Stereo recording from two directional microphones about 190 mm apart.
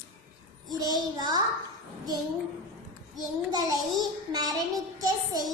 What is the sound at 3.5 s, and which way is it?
A child's voice, 20° right (ahead or behind).